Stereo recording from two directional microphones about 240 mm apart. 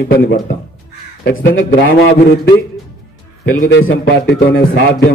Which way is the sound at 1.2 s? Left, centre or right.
Left.